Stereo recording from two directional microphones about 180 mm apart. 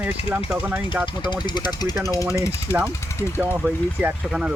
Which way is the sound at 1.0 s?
25° left (ahead or behind).